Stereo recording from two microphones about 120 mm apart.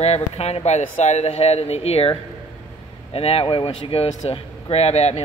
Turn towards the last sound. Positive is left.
turn(degrees=60)  # may be behind; listen again after turning